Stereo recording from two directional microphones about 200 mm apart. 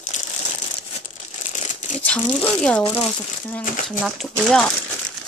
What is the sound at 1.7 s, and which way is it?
Crumpling, 40° left (ahead or behind).